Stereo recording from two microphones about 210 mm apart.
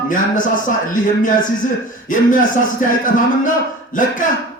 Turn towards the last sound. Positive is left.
turn(degrees=40)  # may be behind; listen again after turning